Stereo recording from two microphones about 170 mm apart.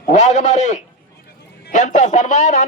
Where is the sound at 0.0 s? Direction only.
50° left (ahead or behind).